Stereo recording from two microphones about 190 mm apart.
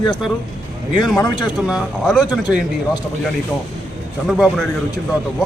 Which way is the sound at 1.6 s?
Centre (ahead or behind).